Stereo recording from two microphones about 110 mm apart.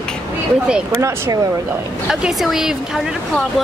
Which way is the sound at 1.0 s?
25° right (ahead or behind).